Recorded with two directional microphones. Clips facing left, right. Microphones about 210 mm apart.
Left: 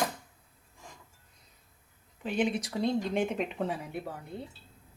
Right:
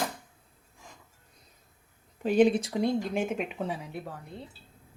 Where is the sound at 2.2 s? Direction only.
40° right (ahead or behind).